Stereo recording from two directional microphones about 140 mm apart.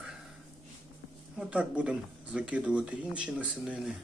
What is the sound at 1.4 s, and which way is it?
Speech, 10° right (ahead or behind).